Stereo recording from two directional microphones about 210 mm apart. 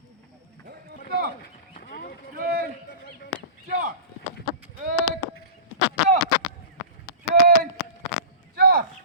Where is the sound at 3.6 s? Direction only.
45° right (ahead or behind).